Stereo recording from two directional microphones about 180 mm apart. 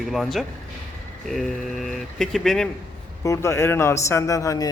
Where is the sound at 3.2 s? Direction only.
15° left (ahead or behind).